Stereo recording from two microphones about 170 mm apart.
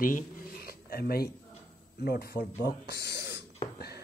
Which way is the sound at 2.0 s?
70° left (ahead or behind).